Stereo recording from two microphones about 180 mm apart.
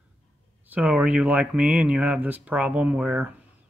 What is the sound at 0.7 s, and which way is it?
Speech, 10° right (ahead or behind).